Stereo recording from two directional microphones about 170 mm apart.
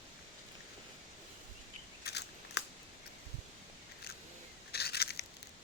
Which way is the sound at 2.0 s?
80° left.